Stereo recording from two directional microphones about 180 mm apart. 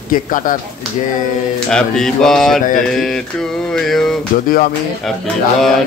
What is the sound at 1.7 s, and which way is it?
Mantra, 5° left (ahead or behind).